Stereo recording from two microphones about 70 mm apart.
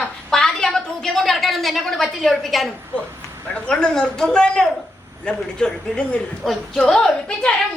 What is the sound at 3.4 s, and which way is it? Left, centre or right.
A child's voice, centre.